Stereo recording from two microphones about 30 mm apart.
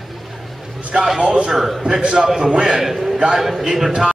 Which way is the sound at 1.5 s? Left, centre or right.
Centre.